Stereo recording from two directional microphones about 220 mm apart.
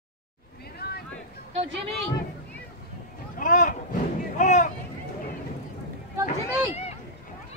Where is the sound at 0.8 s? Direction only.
45° left (ahead or behind).